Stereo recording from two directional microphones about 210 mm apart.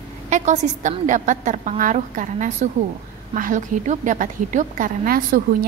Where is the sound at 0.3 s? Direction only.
35° right (ahead or behind).